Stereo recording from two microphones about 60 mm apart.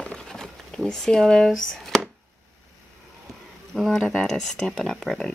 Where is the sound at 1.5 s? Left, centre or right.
Centre.